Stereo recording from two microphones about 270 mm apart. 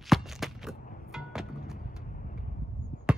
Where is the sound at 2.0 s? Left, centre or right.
Left.